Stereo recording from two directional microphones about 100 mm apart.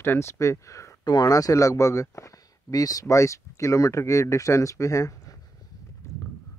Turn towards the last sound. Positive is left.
turn(degrees=35)  # may be behind; listen again after turning